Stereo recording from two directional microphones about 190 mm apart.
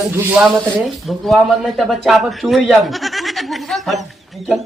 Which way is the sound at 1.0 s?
Centre (ahead or behind).